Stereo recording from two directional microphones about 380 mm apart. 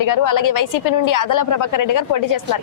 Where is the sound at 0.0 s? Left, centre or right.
Left.